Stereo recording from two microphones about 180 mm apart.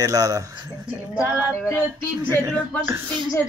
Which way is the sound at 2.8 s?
15° right (ahead or behind).